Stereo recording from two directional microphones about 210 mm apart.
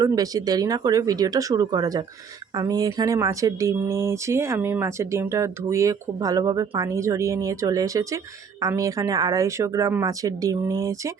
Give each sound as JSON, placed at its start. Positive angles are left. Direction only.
{"t": 0.0, "sound": "speech", "side_deg": -15}